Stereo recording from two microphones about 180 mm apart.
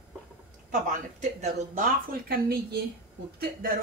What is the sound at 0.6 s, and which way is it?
Speech, 45° right (ahead or behind).